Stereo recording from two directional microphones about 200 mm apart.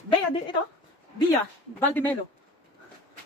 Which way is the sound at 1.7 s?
10° left (ahead or behind).